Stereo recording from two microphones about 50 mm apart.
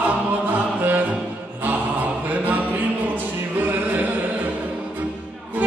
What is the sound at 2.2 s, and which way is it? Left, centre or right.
Music, right.